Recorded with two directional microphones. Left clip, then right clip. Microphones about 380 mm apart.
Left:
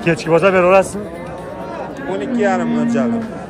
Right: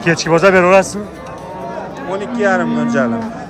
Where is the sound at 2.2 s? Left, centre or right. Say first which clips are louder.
Right 2 dB; right.